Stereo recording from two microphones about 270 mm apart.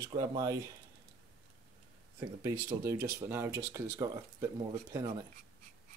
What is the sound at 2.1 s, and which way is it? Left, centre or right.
Speech, centre.